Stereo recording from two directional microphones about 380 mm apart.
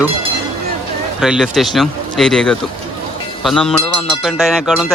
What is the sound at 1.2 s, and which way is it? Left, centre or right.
Speech, centre.